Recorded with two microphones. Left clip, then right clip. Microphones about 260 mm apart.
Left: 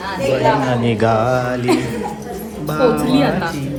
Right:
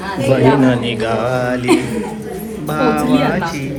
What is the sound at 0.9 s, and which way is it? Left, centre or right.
Speech, centre.